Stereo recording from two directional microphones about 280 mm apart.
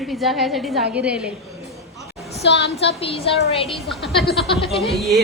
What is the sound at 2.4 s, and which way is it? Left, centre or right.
Speech, left.